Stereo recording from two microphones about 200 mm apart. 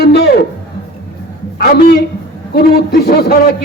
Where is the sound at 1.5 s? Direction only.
50° left (ahead or behind).